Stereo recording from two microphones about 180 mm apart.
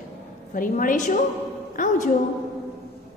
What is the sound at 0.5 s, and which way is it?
A woman's voice, 50° left (ahead or behind).